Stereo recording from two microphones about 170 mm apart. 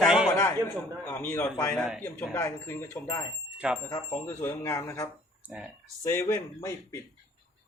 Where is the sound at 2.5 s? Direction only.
10° left (ahead or behind).